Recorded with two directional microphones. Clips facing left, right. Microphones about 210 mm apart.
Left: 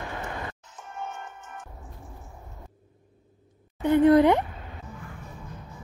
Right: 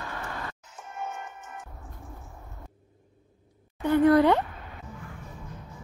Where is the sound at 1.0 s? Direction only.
15° right (ahead or behind).